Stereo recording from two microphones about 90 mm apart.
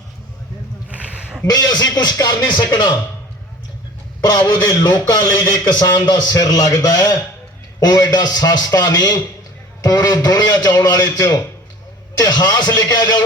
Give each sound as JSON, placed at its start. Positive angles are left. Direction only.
{"t": 0.9, "sound": "a sound", "side_deg": -15}
{"t": 1.5, "sound": "a man's voice", "side_deg": 45}
{"t": 4.2, "sound": "a man's voice", "side_deg": 50}